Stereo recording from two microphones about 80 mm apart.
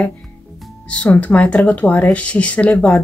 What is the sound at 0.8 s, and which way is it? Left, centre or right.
Speech, centre.